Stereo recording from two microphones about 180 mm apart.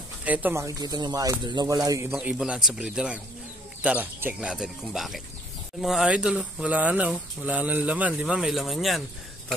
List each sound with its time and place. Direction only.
0.2 s speech: 10° right (ahead or behind)
2.1 s speech: 5° right (ahead or behind)